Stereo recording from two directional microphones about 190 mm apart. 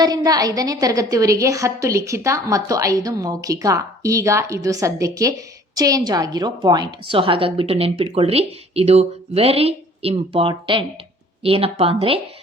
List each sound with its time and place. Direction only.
0.0 s a woman's voice: 20° right (ahead or behind)